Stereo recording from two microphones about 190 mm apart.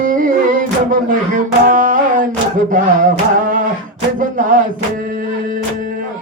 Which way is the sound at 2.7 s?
45° right (ahead or behind).